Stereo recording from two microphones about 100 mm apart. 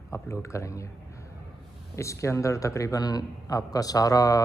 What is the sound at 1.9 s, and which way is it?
A man's voice, 30° left (ahead or behind).